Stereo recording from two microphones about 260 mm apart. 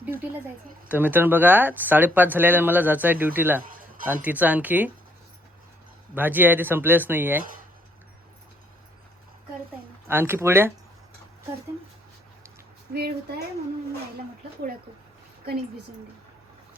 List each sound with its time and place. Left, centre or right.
0.0 s a sound: centre
0.9 s speech: centre
6.1 s speech: centre
10.1 s speech: centre
12.9 s speech: right